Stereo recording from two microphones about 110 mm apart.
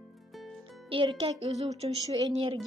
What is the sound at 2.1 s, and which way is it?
Speech, 40° right (ahead or behind).